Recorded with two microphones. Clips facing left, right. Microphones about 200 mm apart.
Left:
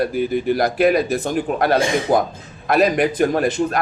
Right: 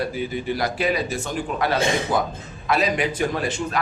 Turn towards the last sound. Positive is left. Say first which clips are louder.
# left 7 dB
turn(degrees=55)  # may be behind; listen again after turning